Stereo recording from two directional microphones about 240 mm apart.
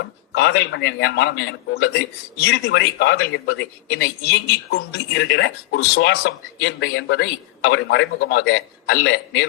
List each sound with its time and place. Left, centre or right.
0.3 s a man's voice: left